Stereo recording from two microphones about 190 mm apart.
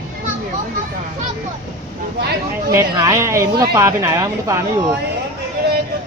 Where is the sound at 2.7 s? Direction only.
20° right (ahead or behind).